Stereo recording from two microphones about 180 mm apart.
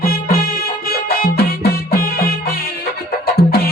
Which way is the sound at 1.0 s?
55° left (ahead or behind).